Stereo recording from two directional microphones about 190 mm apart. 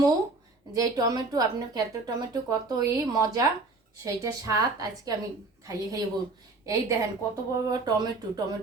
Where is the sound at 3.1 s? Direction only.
20° right (ahead or behind).